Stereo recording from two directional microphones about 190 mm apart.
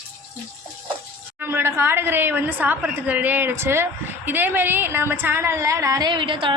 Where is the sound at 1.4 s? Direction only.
10° right (ahead or behind).